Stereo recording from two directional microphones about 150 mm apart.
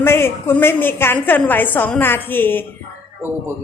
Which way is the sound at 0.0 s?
15° left (ahead or behind).